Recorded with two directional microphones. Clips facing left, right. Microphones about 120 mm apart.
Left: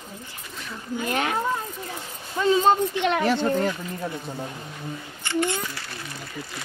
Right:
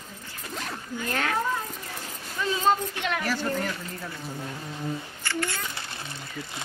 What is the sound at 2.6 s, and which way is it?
Speech, 25° left (ahead or behind).